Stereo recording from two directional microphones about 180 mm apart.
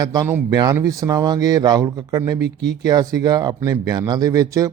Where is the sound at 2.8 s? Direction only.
20° right (ahead or behind).